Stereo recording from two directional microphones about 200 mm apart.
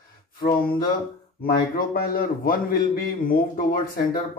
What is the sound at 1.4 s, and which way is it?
A man's voice, 45° left (ahead or behind).